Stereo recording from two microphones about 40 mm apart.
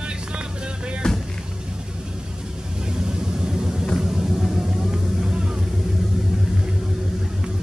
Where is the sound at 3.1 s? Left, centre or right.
Centre.